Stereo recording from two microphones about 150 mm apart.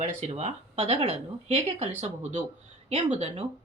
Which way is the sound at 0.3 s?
45° right (ahead or behind).